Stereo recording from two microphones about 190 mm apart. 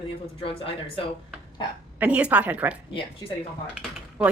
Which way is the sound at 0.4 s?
30° left (ahead or behind).